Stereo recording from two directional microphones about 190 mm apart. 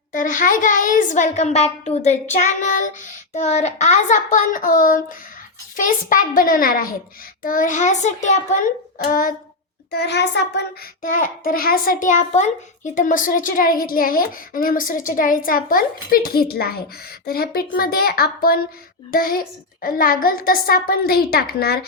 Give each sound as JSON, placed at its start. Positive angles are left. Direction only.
{"t": 0.1, "sound": "a child's voice", "side_deg": 45}
{"t": 9.9, "sound": "a child's voice", "side_deg": 60}
{"t": 11.0, "sound": "a child's voice", "side_deg": 45}